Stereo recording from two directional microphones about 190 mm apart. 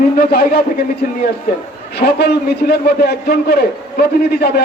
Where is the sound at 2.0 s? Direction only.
55° left (ahead or behind).